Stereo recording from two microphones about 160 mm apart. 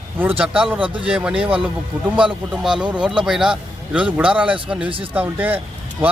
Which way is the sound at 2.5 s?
5° right (ahead or behind).